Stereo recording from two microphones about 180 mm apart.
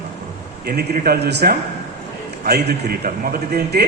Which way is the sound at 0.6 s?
60° right (ahead or behind).